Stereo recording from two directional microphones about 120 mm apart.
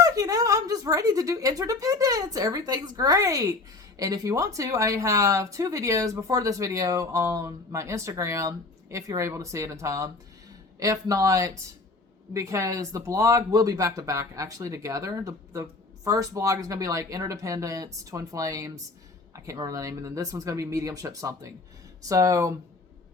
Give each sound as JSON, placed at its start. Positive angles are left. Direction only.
{"t": 0.0, "sound": "speech", "side_deg": -30}